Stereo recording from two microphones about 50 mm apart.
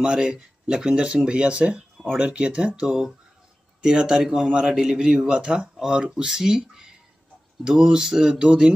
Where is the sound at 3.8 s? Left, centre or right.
Centre.